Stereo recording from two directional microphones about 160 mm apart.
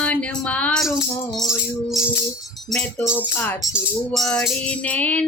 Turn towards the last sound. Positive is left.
turn(degrees=10)  # may be behind; listen again after turning